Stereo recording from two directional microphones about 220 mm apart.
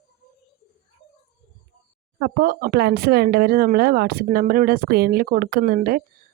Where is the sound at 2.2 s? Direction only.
40° right (ahead or behind).